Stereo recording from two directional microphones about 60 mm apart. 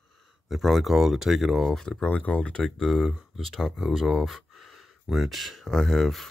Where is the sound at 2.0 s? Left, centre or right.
Left.